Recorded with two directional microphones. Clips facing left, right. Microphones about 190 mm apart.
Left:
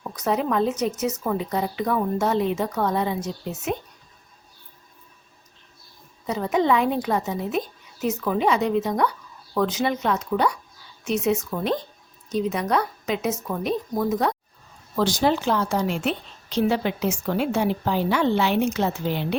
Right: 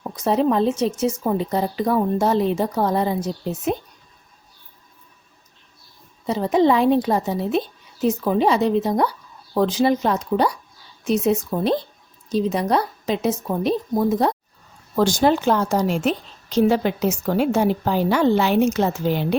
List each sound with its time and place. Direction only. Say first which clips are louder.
0.0 s speech: right 5 dB; 30° right (ahead or behind)
6.2 s speech: right 4 dB; 30° right (ahead or behind)
14.9 s a woman's voice: right 4 dB; 45° right (ahead or behind)